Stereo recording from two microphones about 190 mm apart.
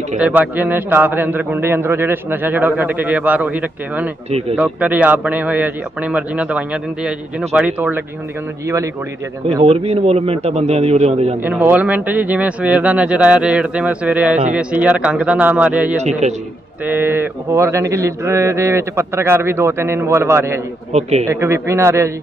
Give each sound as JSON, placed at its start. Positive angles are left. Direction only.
{"t": 0.2, "sound": "speech", "side_deg": -5}
{"t": 9.6, "sound": "a man's voice", "side_deg": -30}
{"t": 11.4, "sound": "speech", "side_deg": -10}
{"t": 16.0, "sound": "a man's voice", "side_deg": -35}
{"t": 16.8, "sound": "speech", "side_deg": -10}
{"t": 20.9, "sound": "a man's voice", "side_deg": -35}
{"t": 21.3, "sound": "speech", "side_deg": -15}